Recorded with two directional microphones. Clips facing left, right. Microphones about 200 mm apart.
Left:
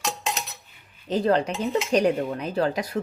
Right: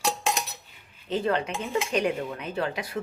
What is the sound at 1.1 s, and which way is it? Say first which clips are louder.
Speech: left 4 dB; 35° left (ahead or behind).